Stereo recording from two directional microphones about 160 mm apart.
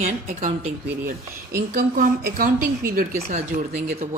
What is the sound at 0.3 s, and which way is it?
Speech, 55° right (ahead or behind).